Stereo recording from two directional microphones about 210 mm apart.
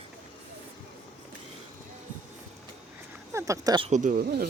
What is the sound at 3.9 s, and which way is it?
Speech, 35° right (ahead or behind).